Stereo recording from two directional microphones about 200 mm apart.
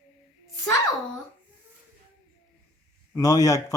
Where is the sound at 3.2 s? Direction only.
20° left (ahead or behind).